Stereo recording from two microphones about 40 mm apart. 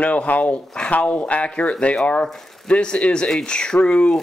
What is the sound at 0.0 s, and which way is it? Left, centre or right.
Speech, left.